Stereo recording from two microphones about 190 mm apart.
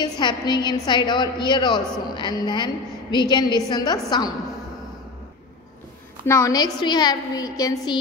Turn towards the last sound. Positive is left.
turn(degrees=20)  # may be behind; listen again after turning